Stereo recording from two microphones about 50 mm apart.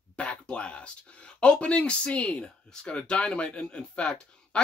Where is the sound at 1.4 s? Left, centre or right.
Left.